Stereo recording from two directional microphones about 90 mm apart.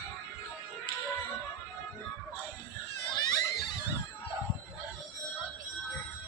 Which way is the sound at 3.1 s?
50° left (ahead or behind).